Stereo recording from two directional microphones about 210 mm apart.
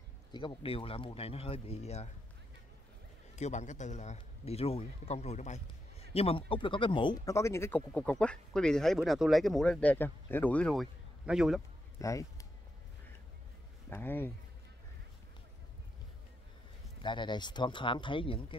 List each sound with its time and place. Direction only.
0.3 s speech: 20° left (ahead or behind)
3.3 s a man's voice: 35° left (ahead or behind); by 11.6 s 5° right (ahead or behind)
12.0 s speech: 15° left (ahead or behind)
13.8 s speech: 10° left (ahead or behind)
17.0 s speech: 20° left (ahead or behind)